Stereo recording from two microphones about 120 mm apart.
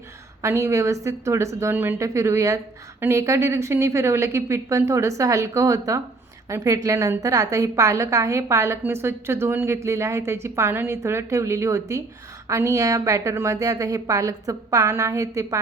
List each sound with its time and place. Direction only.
0.4 s a woman's voice: 25° right (ahead or behind)